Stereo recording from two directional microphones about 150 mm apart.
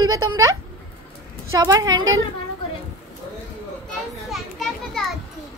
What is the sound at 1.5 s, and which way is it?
Speech, 25° right (ahead or behind).